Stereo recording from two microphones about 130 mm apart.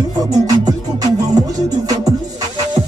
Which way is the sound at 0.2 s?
30° right (ahead or behind).